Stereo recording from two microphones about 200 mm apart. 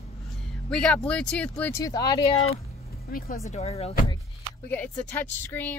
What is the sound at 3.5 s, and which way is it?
Speech, 30° left (ahead or behind).